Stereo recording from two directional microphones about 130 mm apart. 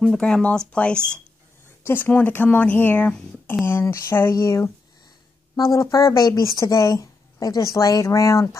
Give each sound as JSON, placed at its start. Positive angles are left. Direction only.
{"t": 0.0, "sound": "speech", "side_deg": 5}
{"t": 1.8, "sound": "speech", "side_deg": 20}